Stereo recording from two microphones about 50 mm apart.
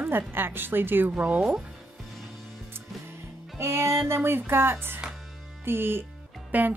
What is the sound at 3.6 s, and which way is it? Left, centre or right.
Speech, right.